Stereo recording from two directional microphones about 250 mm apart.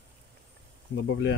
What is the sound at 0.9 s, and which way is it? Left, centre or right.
Speech, left.